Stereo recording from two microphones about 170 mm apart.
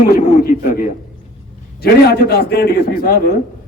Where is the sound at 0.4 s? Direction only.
55° left (ahead or behind).